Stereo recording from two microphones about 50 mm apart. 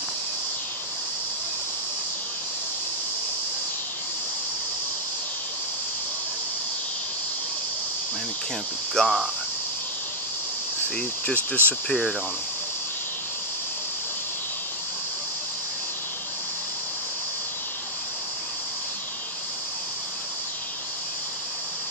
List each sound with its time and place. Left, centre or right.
8.9 s speech: centre
11.0 s speech: left
11.9 s speech: centre